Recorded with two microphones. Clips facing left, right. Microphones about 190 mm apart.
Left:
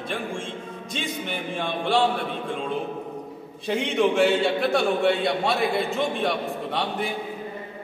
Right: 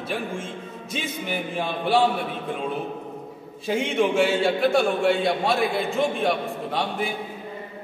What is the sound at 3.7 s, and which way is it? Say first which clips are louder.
A man's voice: even; centre (ahead or behind).